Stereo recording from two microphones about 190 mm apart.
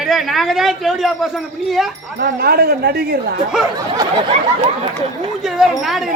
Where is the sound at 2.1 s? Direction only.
55° right (ahead or behind).